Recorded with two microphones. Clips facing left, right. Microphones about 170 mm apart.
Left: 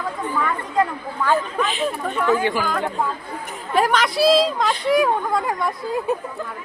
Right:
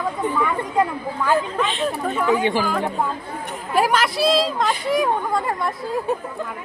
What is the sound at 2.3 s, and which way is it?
Speech, 20° right (ahead or behind).